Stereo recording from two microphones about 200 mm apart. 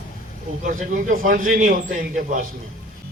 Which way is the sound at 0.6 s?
40° right (ahead or behind).